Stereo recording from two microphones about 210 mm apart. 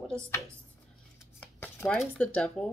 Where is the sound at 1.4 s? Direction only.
10° left (ahead or behind).